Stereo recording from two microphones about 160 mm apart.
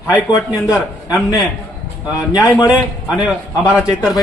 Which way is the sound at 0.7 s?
Centre (ahead or behind).